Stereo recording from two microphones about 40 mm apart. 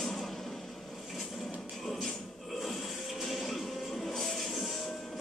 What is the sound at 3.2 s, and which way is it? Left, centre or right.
Music, centre.